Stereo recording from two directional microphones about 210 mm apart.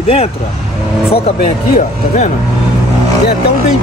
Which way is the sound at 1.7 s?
35° left (ahead or behind).